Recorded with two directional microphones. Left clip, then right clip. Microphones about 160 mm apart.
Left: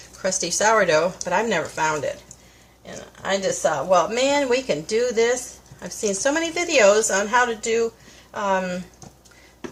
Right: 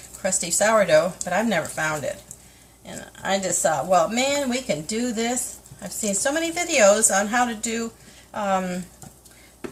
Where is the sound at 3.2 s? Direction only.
25° left (ahead or behind).